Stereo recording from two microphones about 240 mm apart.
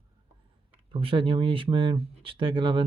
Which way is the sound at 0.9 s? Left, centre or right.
Right.